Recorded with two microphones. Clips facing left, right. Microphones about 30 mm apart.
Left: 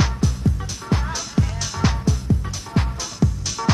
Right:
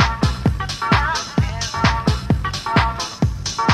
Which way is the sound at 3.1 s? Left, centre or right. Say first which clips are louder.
Right 2 dB; right.